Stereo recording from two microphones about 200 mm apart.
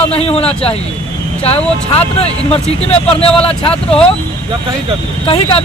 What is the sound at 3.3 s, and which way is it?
Speech, 5° left (ahead or behind).